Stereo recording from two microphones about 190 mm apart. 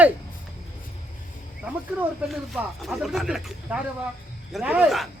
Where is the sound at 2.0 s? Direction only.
5° right (ahead or behind).